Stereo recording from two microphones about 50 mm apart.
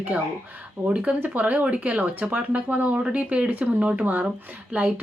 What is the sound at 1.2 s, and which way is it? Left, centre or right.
Speech, right.